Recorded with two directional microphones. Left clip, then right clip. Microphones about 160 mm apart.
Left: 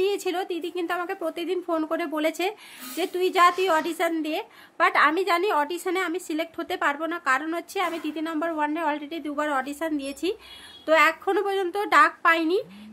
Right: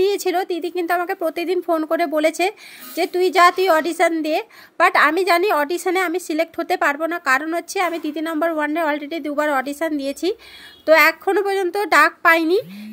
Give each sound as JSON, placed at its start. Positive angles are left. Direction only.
{"t": 0.0, "sound": "speech", "side_deg": -35}